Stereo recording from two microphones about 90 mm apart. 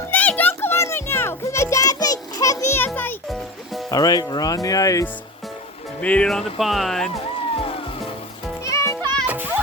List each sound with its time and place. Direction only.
0.1 s music: 20° left (ahead or behind)
3.2 s music: centre (ahead or behind)
3.9 s speech: 45° left (ahead or behind)
6.0 s speech: 15° left (ahead or behind)
6.2 s speech: centre (ahead or behind)
7.5 s music: 90° left
8.6 s music: 35° left (ahead or behind)
9.2 s music: 20° right (ahead or behind)